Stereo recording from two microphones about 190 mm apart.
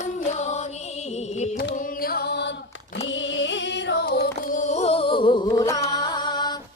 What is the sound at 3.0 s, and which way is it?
Singing, 75° left (ahead or behind).